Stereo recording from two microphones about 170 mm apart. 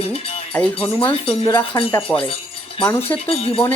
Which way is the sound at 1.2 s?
30° left (ahead or behind).